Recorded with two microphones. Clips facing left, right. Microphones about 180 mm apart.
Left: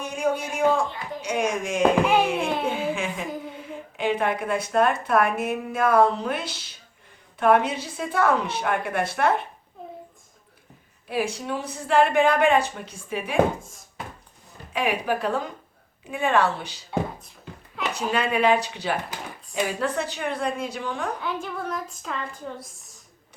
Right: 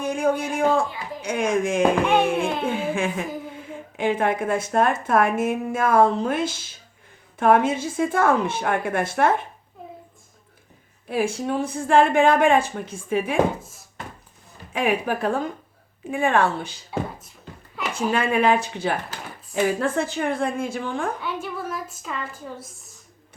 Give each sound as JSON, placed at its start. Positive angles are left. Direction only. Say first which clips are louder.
{"t": 0.0, "sound": "a sound", "louder": "right 3 dB", "side_deg": -55}
{"t": 1.2, "sound": "speech", "louder": "right 3 dB", "side_deg": -55}
{"t": 2.4, "sound": "a sound", "louder": "right 1 dB", "side_deg": 0}
{"t": 2.6, "sound": "a sound", "louder": "right 2 dB", "side_deg": -50}
{"t": 3.9, "sound": "speech", "louder": "right 2 dB", "side_deg": -50}
{"t": 11.1, "sound": "speech", "louder": "right 3 dB", "side_deg": -50}
{"t": 14.7, "sound": "speech", "louder": "right 2 dB", "side_deg": -50}
{"t": 16.9, "sound": "beatboxing", "louder": "left 1 dB", "side_deg": 0}
{"t": 17.9, "sound": "speech", "louder": "right 3 dB", "side_deg": -50}
{"t": 21.2, "sound": "a woman's voice", "louder": "even", "side_deg": -5}